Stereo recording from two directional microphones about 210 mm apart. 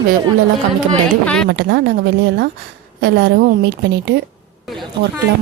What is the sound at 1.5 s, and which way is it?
Speech, 55° right (ahead or behind).